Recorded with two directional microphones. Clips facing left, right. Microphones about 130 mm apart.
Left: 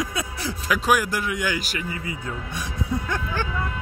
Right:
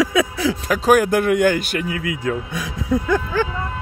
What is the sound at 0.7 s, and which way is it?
Speech, 40° right (ahead or behind).